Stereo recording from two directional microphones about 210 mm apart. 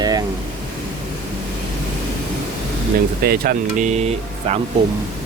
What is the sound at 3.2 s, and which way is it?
Speech, 45° right (ahead or behind).